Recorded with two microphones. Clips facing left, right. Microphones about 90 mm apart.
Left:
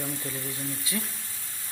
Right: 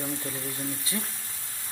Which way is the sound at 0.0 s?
20° right (ahead or behind).